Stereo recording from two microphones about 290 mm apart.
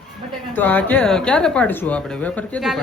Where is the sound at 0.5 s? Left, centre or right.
Centre.